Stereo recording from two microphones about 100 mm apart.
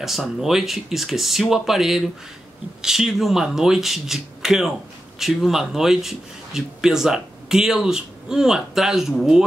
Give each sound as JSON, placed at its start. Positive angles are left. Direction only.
{"t": 0.0, "sound": "a man's voice", "side_deg": 0}